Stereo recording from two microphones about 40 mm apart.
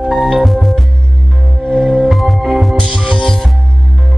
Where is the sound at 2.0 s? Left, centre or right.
Centre.